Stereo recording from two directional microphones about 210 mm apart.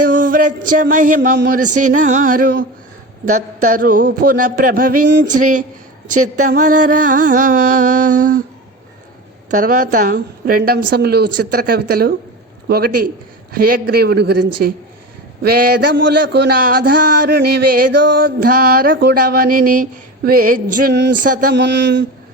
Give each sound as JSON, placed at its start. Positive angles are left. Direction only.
{"t": 0.1, "sound": "music", "side_deg": -40}
{"t": 0.9, "sound": "a man's voice", "side_deg": -40}
{"t": 9.5, "sound": "a man's voice", "side_deg": -40}
{"t": 21.2, "sound": "a man's voice", "side_deg": -40}
{"t": 21.5, "sound": "a sound", "side_deg": -55}